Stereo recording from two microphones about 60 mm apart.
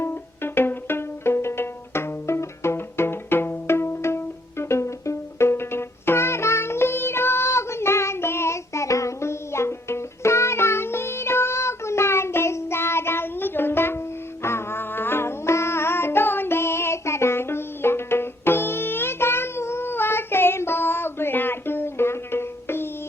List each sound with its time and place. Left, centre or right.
0.0 s music: left